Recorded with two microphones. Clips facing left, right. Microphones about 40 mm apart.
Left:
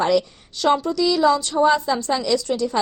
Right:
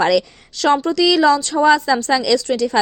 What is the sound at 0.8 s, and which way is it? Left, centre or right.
A woman's voice, right.